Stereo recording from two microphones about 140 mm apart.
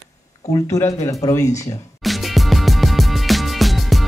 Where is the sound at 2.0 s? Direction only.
Centre (ahead or behind).